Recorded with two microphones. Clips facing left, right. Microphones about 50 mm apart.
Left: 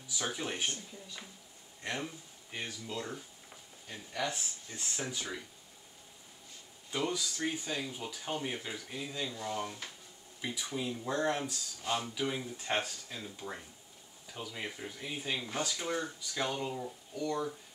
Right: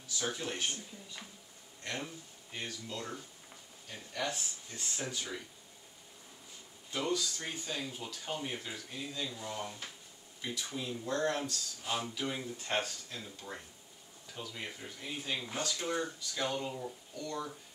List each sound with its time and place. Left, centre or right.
0.1 s speech: centre
1.8 s speech: centre
6.9 s speech: centre
11.8 s speech: centre